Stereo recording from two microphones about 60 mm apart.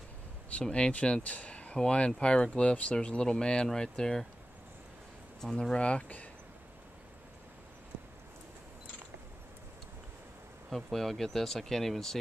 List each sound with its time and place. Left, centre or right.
0.5 s speech: centre
5.4 s speech: centre
10.7 s speech: centre